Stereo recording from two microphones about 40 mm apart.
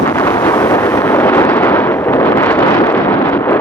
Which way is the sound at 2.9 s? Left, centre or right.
Left.